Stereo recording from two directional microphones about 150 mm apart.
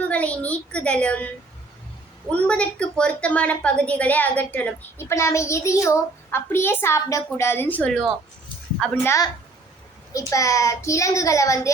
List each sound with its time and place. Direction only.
0.0 s a woman's voice: 10° left (ahead or behind)
2.3 s a woman's voice: 10° left (ahead or behind)
9.0 s a child's voice: 20° left (ahead or behind)